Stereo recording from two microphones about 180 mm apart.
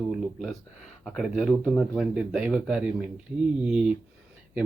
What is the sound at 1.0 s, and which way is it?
Speech, centre (ahead or behind).